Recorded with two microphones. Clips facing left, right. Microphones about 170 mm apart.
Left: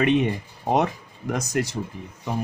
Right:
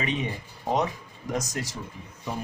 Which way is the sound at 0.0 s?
65° left (ahead or behind).